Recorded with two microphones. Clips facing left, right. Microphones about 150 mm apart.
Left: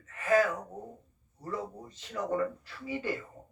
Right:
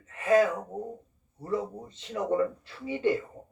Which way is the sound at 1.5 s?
25° right (ahead or behind).